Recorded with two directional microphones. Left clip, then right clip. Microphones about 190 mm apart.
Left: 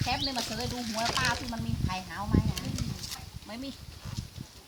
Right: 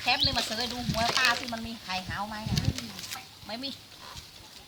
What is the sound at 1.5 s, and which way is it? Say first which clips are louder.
Speech: right 2 dB; 30° right (ahead or behind).